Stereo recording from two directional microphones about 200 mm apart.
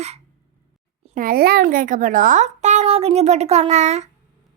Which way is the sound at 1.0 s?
45° right (ahead or behind).